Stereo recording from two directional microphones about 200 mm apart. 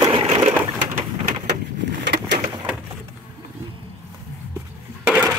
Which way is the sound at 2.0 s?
60° right (ahead or behind).